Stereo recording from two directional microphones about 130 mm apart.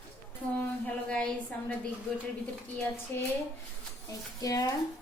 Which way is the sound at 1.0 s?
10° left (ahead or behind).